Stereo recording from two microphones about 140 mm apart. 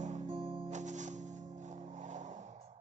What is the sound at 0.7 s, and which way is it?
Music, 60° right (ahead or behind).